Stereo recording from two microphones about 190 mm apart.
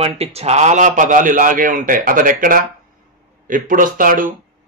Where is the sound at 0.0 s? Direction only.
35° right (ahead or behind).